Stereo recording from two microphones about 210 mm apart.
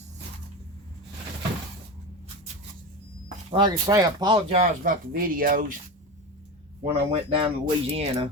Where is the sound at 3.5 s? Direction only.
20° right (ahead or behind); by 5.7 s 40° right (ahead or behind).